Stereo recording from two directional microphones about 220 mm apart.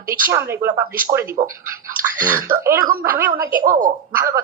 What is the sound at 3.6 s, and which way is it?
Speech, 40° right (ahead or behind).